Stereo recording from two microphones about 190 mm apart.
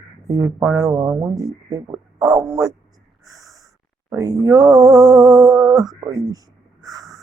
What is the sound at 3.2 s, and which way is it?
Snort, 20° right (ahead or behind).